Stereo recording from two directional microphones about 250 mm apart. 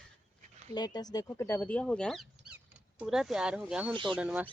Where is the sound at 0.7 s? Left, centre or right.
Centre.